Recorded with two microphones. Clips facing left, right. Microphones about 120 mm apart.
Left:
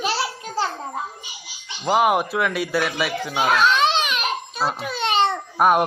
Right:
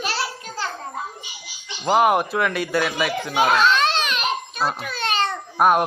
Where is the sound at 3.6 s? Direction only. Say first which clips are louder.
Even; 15° left (ahead or behind).